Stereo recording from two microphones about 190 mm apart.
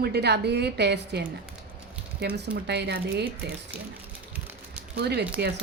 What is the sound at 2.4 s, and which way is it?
A woman's voice, 65° right (ahead or behind).